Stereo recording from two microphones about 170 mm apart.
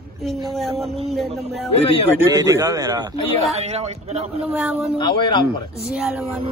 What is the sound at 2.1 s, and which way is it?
Speech, 15° right (ahead or behind).